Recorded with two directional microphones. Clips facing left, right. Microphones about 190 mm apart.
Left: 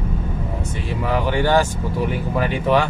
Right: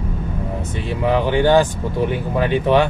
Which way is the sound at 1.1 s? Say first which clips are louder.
Right 4 dB; 20° right (ahead or behind).